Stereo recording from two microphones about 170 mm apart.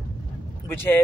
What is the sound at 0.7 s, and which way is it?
Speech, 10° left (ahead or behind).